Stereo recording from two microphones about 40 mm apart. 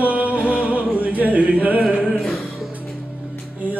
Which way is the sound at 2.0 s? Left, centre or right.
Centre.